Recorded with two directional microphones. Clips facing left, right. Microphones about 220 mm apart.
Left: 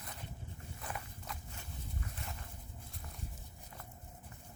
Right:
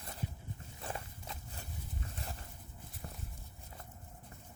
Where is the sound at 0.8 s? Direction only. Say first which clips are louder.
Right 2 dB; 30° right (ahead or behind).